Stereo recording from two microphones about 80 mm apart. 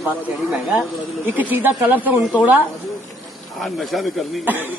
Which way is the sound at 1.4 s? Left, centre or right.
Right.